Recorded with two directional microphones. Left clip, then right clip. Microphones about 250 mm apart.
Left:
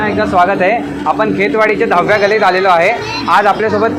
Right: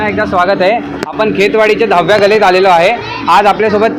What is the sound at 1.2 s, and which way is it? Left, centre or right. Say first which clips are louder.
A woman's voice: right 5 dB; right.